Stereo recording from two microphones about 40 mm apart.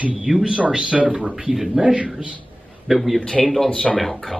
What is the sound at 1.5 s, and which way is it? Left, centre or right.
Speech, centre.